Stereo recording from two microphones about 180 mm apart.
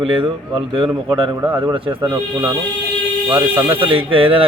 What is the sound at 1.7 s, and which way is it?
Speech, 30° right (ahead or behind).